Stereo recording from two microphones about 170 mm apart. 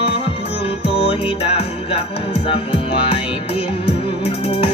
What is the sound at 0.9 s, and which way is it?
Music, 35° left (ahead or behind).